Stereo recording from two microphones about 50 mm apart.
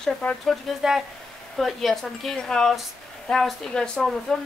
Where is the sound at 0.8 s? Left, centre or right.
Centre.